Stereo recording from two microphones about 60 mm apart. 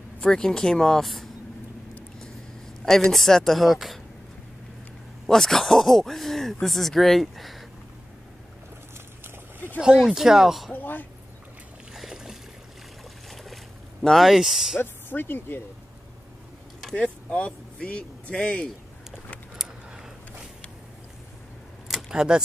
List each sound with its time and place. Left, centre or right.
0.2 s speech: centre
2.8 s speech: centre
5.2 s speech: centre
9.8 s speech: centre
10.7 s speech: left
11.9 s boat: centre
13.3 s boat: centre
14.0 s speech: centre
14.8 s speech: left
16.9 s speech: centre
21.8 s camera: centre